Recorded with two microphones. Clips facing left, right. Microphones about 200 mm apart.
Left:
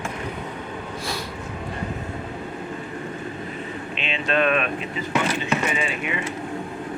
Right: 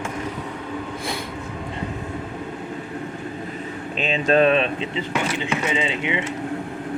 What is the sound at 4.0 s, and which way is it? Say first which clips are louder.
Speech: right 6 dB; 40° right (ahead or behind).